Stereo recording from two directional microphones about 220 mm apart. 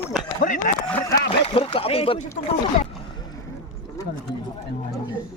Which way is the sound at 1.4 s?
25° left (ahead or behind).